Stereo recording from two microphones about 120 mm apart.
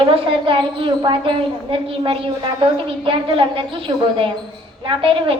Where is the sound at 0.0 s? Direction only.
45° right (ahead or behind).